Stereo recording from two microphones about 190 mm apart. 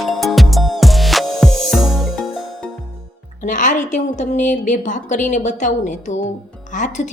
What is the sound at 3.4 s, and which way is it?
A woman's voice, 40° left (ahead or behind).